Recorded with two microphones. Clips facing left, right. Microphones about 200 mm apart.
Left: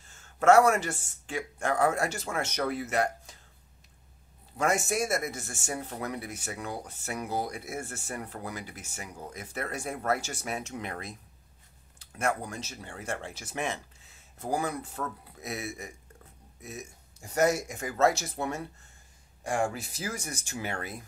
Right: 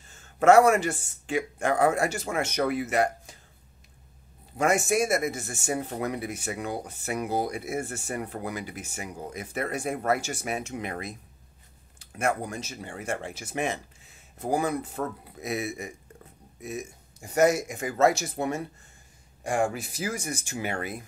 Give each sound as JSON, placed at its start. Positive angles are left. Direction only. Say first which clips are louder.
{"t": 0.4, "sound": "speech", "louder": "right 3 dB", "side_deg": -15}
{"t": 4.6, "sound": "speech", "louder": "right 4 dB", "side_deg": -15}
{"t": 12.0, "sound": "a sound", "louder": "right 3 dB", "side_deg": -15}
{"t": 12.4, "sound": "speech", "louder": "right 4 dB", "side_deg": -50}
{"t": 12.6, "sound": "speech", "louder": "right 4 dB", "side_deg": -15}
{"t": 14.4, "sound": "speech", "louder": "right 4 dB", "side_deg": -20}